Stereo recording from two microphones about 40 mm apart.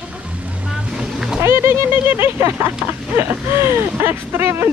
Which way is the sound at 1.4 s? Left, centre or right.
Right.